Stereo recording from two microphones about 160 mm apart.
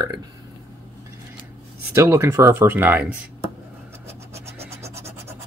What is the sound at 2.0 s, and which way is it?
Speech, 15° right (ahead or behind).